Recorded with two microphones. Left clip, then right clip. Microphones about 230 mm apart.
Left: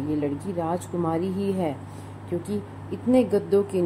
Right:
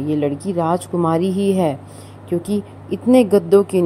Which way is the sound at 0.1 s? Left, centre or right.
Right.